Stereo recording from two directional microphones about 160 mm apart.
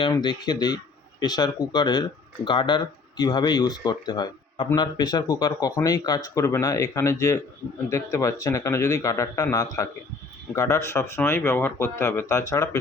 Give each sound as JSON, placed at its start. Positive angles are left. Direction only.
{"t": 0.0, "sound": "speech", "side_deg": 30}